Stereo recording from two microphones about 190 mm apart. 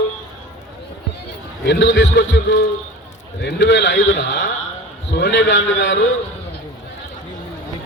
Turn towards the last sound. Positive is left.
turn(degrees=75)  # may be behind; listen again after turning